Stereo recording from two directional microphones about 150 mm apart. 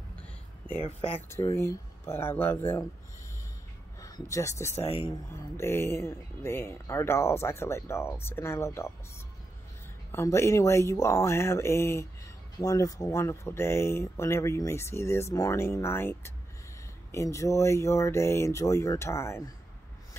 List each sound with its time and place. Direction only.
0.7 s speech: 40° left (ahead or behind)
1.3 s speech: 20° left (ahead or behind)
4.0 s speech: 20° left (ahead or behind)
4.8 s speech: 40° left (ahead or behind)
5.3 s speech: 15° left (ahead or behind)
10.1 s speech: 20° left (ahead or behind)